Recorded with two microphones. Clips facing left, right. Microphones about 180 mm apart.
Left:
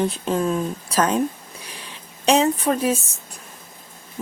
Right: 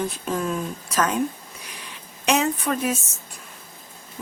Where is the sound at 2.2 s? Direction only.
30° left (ahead or behind).